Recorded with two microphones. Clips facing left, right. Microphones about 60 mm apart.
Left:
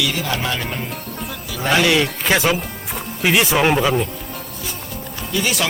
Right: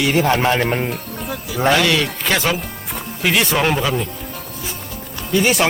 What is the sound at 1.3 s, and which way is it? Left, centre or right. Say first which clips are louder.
Speech: right 7 dB; centre.